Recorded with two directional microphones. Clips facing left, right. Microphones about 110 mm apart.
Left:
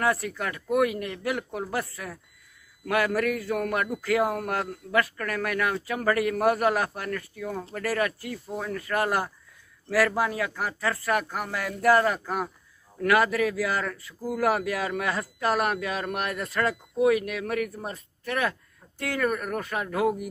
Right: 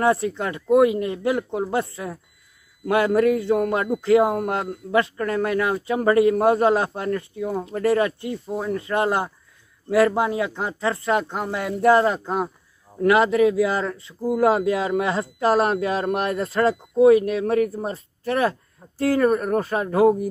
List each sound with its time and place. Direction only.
0.0 s speech: 25° right (ahead or behind)